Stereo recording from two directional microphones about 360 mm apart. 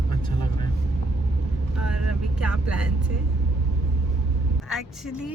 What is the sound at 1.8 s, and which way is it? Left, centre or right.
Vehicle, right.